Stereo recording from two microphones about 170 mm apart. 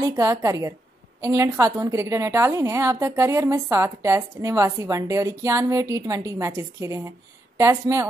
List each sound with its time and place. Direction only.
0.0 s a woman's voice: 20° right (ahead or behind)